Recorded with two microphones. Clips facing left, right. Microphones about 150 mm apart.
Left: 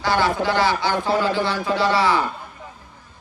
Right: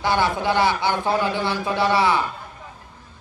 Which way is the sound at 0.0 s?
20° right (ahead or behind).